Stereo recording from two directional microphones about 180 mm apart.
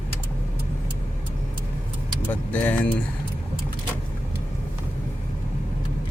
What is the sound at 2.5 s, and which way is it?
Speech, 10° left (ahead or behind).